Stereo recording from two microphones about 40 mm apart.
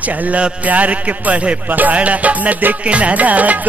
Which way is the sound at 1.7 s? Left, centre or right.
Right.